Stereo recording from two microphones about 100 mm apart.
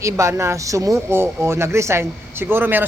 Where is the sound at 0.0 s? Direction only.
30° right (ahead or behind).